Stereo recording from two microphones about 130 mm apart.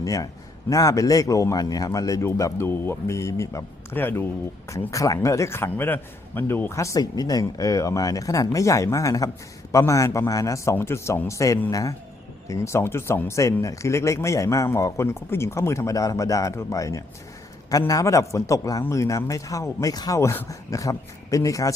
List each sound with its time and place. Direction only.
0.0 s a man's voice: 25° left (ahead or behind)